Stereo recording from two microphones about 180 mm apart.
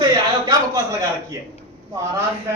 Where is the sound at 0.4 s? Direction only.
20° right (ahead or behind).